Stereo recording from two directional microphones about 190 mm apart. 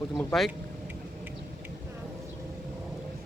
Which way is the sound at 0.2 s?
5° left (ahead or behind).